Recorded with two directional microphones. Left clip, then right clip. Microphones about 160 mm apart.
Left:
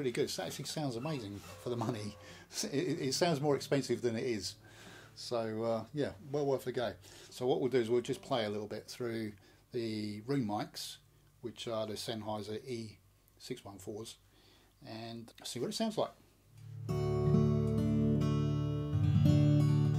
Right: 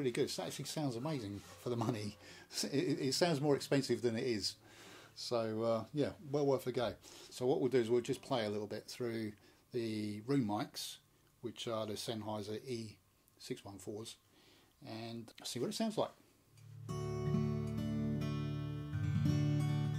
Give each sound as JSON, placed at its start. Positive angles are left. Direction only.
{"t": 0.0, "sound": "speech", "side_deg": 0}
{"t": 16.8, "sound": "music", "side_deg": 25}